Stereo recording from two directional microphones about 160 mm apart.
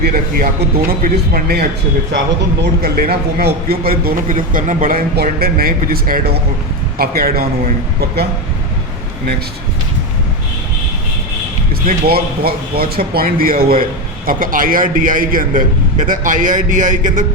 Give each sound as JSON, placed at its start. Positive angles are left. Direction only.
{"t": 0.0, "sound": "a man's voice", "side_deg": -65}
{"t": 2.8, "sound": "a man's voice", "side_deg": -70}
{"t": 11.9, "sound": "a man's voice", "side_deg": -70}